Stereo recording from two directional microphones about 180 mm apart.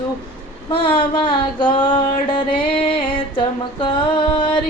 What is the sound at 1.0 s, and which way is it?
Female singing, 25° left (ahead or behind).